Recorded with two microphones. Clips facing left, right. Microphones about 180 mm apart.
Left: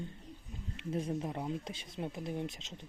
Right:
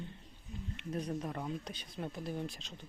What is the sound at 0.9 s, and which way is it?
Speech, 25° left (ahead or behind).